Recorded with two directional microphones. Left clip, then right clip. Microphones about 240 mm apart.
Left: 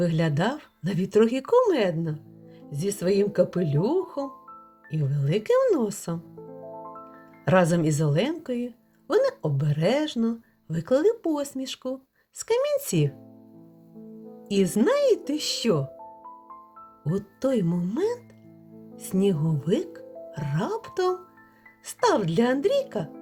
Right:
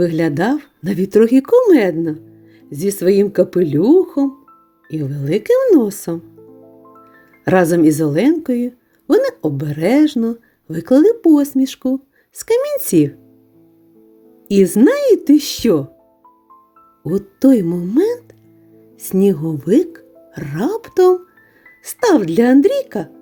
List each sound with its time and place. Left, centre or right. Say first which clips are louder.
0.0 s a woman's voice: right 10 dB; right
7.4 s a woman's voice: right 9 dB; right
14.4 s a woman's voice: right 11 dB; right
17.1 s a woman's voice: right 12 dB; right